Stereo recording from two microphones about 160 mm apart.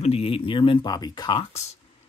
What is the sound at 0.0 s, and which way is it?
Speech, 35° left (ahead or behind).